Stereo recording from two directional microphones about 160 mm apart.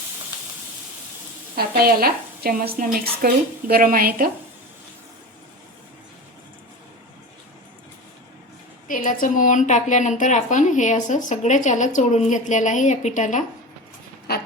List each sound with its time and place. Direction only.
1.5 s a woman's voice: 70° right (ahead or behind)
8.9 s a woman's voice: 55° left (ahead or behind)
14.3 s pig: 85° left